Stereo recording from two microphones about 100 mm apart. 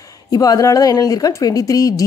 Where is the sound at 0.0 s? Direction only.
35° left (ahead or behind).